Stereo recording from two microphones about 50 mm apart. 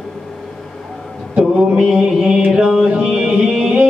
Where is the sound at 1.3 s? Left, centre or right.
Right.